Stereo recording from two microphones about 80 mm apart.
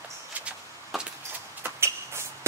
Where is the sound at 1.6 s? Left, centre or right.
Right.